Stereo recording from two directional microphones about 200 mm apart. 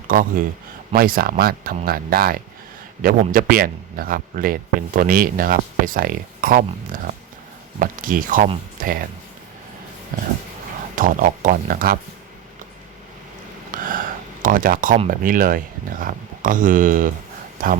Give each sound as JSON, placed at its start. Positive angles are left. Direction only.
{"t": 0.1, "sound": "speech", "side_deg": -45}
{"t": 10.1, "sound": "dog", "side_deg": -45}
{"t": 10.9, "sound": "speech", "side_deg": -45}
{"t": 13.7, "sound": "a sound", "side_deg": -40}
{"t": 14.4, "sound": "speech", "side_deg": -45}